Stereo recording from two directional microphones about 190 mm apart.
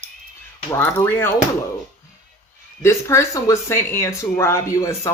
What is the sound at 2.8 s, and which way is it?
Speech, 15° left (ahead or behind).